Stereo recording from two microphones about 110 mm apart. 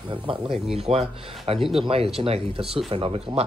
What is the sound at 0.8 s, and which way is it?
Speech, 65° right (ahead or behind).